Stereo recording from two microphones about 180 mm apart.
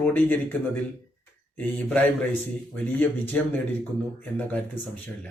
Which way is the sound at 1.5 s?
10° left (ahead or behind).